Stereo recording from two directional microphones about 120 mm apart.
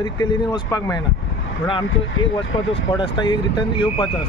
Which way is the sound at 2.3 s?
45° left (ahead or behind).